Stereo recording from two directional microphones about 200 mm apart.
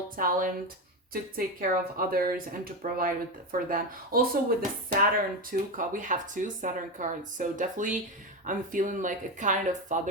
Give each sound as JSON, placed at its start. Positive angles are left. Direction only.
{"t": 0.2, "sound": "speech", "side_deg": -45}